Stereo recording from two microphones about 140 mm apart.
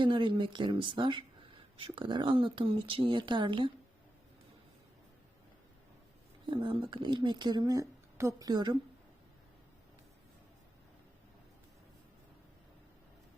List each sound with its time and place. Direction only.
0.0 s speech: 35° right (ahead or behind)
6.4 s speech: 35° right (ahead or behind)